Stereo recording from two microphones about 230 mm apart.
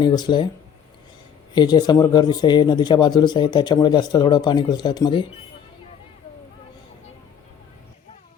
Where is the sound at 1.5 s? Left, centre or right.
Centre.